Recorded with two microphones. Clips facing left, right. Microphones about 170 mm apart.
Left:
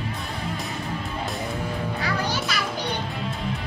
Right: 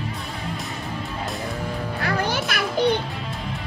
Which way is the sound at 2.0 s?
55° right (ahead or behind).